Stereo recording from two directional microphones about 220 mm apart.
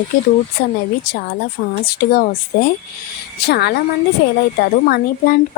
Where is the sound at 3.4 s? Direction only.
45° left (ahead or behind).